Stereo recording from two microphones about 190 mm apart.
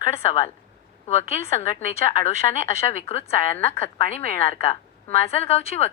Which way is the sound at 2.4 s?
20° left (ahead or behind).